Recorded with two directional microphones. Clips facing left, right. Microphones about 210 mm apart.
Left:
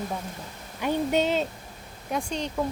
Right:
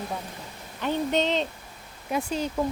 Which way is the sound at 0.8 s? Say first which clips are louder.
Left 1 dB; 10° left (ahead or behind).